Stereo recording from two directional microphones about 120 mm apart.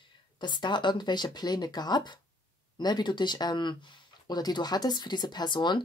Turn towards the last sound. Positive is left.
turn(degrees=40)  # may be behind; listen again after turning